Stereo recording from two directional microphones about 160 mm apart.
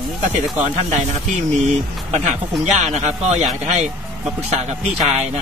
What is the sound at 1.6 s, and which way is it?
Speech, 50° right (ahead or behind).